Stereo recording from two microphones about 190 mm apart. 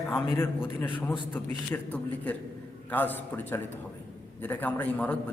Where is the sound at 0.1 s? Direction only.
10° left (ahead or behind).